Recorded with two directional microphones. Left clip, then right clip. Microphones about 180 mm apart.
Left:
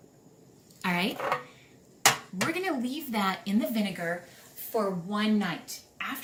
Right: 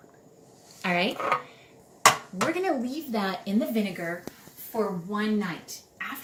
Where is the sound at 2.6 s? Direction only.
65° left (ahead or behind).